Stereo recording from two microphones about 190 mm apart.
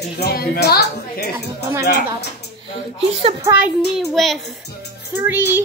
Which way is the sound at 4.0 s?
Centre (ahead or behind).